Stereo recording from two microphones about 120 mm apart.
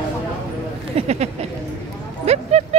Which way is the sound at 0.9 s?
65° right (ahead or behind).